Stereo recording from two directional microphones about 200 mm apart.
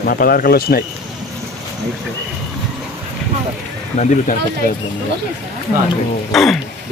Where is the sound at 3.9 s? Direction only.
40° left (ahead or behind).